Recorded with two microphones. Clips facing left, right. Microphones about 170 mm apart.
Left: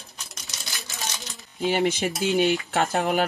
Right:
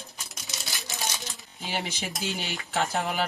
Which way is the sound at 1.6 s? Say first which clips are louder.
Left 10 dB; 60° left (ahead or behind).